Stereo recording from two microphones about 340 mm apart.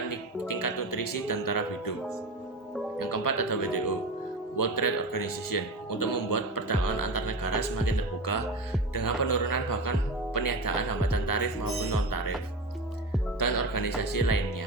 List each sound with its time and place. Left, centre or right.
0.1 s music: left
3.0 s speech: left
13.4 s speech: left